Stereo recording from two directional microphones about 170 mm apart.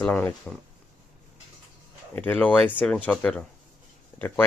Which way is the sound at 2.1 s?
10° left (ahead or behind).